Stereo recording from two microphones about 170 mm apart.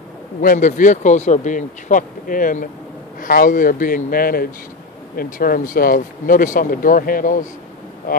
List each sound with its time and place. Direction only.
0.4 s speech: 50° left (ahead or behind)